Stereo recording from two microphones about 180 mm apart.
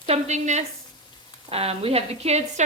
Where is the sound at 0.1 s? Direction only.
40° right (ahead or behind).